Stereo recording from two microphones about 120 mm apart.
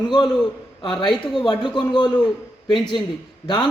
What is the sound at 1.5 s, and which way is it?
A man's voice, 40° left (ahead or behind).